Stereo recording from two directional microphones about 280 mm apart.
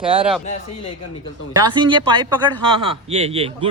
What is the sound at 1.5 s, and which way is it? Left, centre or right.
A man's voice, centre.